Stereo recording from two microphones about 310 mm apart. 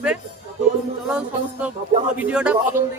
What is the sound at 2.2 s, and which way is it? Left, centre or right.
Speech, centre.